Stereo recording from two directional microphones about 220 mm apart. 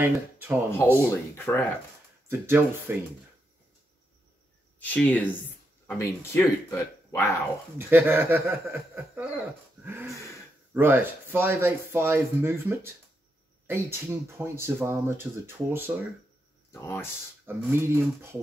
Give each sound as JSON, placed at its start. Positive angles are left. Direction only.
{"t": 0.0, "sound": "speech", "side_deg": -10}
{"t": 1.0, "sound": "speech", "side_deg": 10}
{"t": 2.2, "sound": "speech", "side_deg": -10}
{"t": 4.7, "sound": "speech", "side_deg": 5}
{"t": 7.7, "sound": "speech", "side_deg": -10}
{"t": 10.1, "sound": "speech", "side_deg": 15}
{"t": 10.7, "sound": "speech", "side_deg": -10}
{"t": 16.7, "sound": "speech", "side_deg": 10}
{"t": 17.5, "sound": "speech", "side_deg": -10}